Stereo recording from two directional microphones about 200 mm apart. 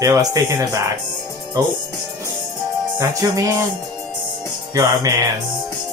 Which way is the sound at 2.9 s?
15° right (ahead or behind).